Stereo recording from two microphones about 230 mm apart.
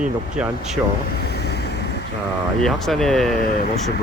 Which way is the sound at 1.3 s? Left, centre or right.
Left.